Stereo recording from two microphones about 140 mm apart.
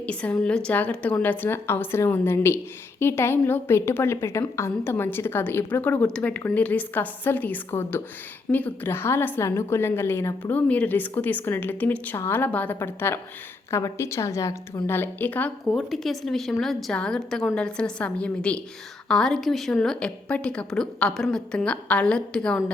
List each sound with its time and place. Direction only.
0.0 s a woman's voice: 10° left (ahead or behind)